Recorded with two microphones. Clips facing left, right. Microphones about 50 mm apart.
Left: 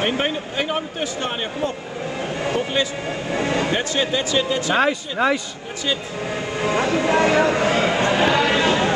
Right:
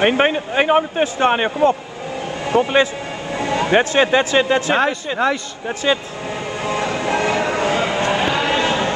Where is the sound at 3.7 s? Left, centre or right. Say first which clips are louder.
Right 7 dB; right.